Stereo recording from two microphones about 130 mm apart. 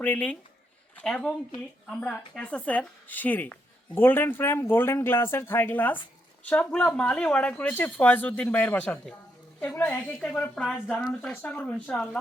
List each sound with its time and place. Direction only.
0.0 s speech: 10° left (ahead or behind)